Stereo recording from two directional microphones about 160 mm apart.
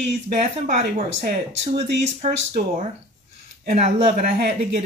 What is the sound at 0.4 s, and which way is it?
Speech, 45° right (ahead or behind).